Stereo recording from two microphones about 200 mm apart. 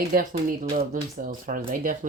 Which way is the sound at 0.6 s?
30° right (ahead or behind).